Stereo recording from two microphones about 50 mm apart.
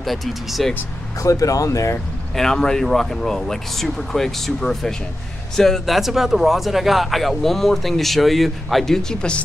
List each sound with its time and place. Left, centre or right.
0.0 s speech: centre
1.2 s speech: left
2.3 s speech: centre
5.9 s speech: centre